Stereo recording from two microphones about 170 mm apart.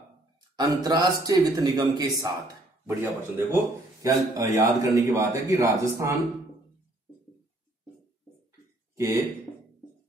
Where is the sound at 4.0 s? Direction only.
20° right (ahead or behind).